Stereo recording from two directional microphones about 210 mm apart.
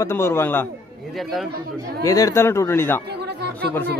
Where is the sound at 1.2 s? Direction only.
Centre (ahead or behind).